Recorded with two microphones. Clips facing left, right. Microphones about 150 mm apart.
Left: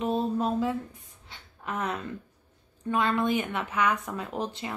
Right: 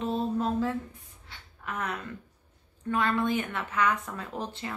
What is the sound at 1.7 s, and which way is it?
Speech, 25° left (ahead or behind).